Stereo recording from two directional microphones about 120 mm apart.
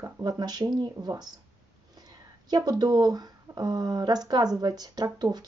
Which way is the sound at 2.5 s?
35° right (ahead or behind).